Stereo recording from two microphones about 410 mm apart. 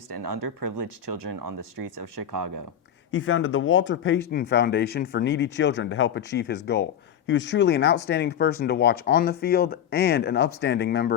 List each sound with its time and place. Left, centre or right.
0.8 s speech: right
1.1 s speech: right
3.1 s speech: left